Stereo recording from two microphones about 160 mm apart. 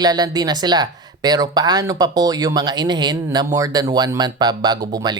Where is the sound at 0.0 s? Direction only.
25° right (ahead or behind).